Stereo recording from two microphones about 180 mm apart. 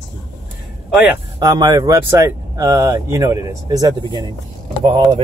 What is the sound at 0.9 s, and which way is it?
Speech, 10° right (ahead or behind).